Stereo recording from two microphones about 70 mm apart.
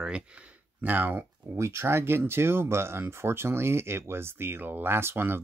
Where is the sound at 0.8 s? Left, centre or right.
Right.